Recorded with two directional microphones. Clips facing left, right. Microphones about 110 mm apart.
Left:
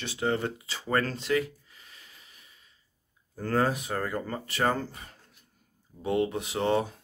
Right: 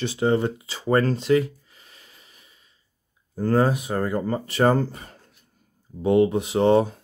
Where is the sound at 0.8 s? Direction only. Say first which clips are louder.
Right 8 dB; 25° right (ahead or behind).